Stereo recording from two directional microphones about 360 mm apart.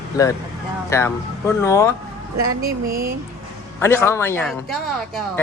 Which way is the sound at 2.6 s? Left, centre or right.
Right.